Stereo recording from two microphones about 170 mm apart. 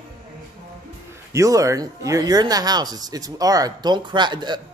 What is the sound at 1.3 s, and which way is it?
Speech, 20° right (ahead or behind).